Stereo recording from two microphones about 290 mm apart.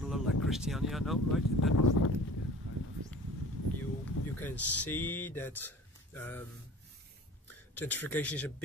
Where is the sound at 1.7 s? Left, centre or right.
Left.